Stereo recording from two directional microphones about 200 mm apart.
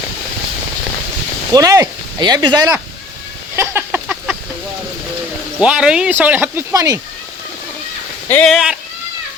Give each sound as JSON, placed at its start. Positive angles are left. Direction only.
{"t": 1.5, "sound": "speech", "side_deg": -15}
{"t": 3.5, "sound": "a sound", "side_deg": -10}
{"t": 5.5, "sound": "speech", "side_deg": -5}
{"t": 8.3, "sound": "speech", "side_deg": 5}